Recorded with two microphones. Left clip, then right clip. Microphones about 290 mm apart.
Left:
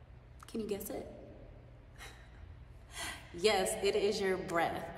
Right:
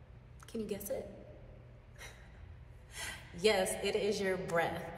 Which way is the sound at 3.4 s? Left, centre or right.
Centre.